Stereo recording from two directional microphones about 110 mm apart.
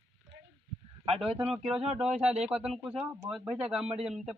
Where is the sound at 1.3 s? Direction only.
60° right (ahead or behind).